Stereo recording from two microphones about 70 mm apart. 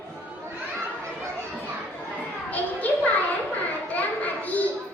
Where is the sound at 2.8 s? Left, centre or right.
Left.